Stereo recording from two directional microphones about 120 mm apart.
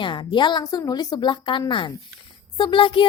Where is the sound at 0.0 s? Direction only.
40° left (ahead or behind).